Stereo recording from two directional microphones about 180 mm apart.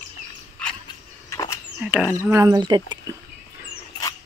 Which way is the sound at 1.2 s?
15° left (ahead or behind).